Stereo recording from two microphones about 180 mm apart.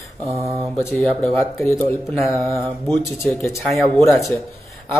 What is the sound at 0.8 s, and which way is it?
Speech, 10° left (ahead or behind).